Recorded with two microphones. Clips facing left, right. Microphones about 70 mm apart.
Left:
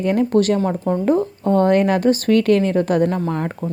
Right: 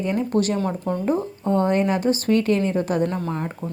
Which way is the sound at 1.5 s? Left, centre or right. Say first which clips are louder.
Left 5 dB; left.